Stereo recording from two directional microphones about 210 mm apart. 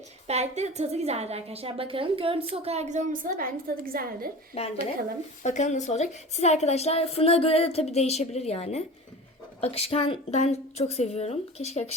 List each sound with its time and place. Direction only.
0.3 s a woman's voice: 30° right (ahead or behind)
4.5 s a woman's voice: 30° left (ahead or behind)